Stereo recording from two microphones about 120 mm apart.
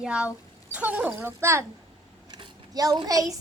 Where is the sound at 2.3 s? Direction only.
35° right (ahead or behind).